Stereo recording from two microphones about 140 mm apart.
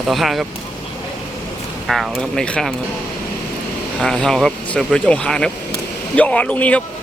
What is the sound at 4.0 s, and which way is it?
Speech, 5° left (ahead or behind).